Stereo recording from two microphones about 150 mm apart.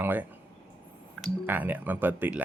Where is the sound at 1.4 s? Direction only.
15° right (ahead or behind).